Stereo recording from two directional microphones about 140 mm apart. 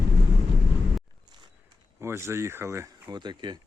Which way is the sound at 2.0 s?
20° right (ahead or behind).